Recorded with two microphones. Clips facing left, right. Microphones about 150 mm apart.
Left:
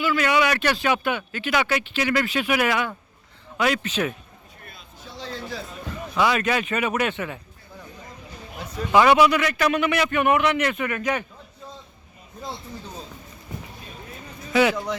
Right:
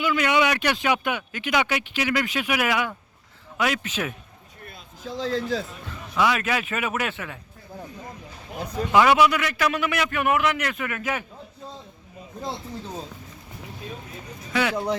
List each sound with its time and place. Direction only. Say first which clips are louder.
0.0 s a man's voice: even; 15° right (ahead or behind)
5.2 s speech: right 8 dB; 90° right
6.1 s a man's voice: left 1 dB; centre (ahead or behind)
8.9 s a man's voice: left 2 dB; centre (ahead or behind)
14.5 s a man's voice: left 5 dB; 5° left (ahead or behind)